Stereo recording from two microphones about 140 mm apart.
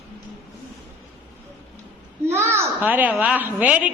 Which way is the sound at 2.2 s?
20° right (ahead or behind).